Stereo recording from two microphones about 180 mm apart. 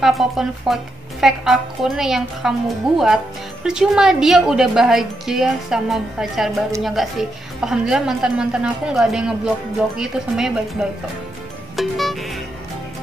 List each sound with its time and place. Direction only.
0.0 s a woman's voice: centre (ahead or behind)
11.7 s music: centre (ahead or behind)